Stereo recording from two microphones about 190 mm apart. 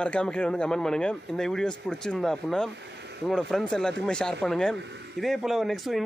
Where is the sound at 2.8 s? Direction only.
65° right (ahead or behind).